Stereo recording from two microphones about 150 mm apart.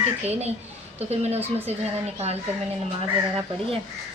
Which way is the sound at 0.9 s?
45° right (ahead or behind).